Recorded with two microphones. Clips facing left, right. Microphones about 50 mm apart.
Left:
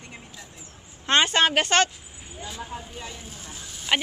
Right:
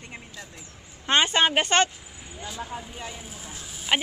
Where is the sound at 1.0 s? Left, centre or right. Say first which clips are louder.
Left 1 dB; centre.